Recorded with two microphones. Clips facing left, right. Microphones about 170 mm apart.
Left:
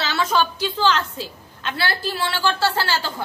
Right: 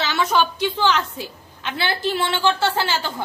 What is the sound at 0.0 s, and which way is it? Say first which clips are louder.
A woman's voice: right 1 dB; 20° right (ahead or behind).